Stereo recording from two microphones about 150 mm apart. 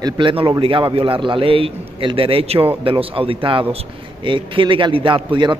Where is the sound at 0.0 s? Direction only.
35° right (ahead or behind).